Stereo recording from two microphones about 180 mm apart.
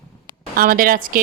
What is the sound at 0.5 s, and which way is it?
Speech, 55° right (ahead or behind).